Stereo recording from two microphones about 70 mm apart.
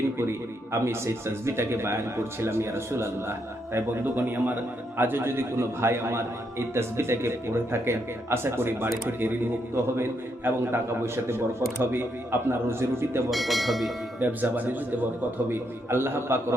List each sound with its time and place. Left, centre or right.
0.2 s a man's voice: right
4.0 s a man's voice: right
13.3 s speech: centre
14.2 s a man's voice: right